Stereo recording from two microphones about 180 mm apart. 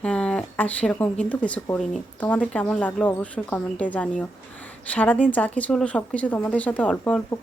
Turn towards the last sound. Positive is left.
turn(degrees=5)  # may be behind; listen again after turning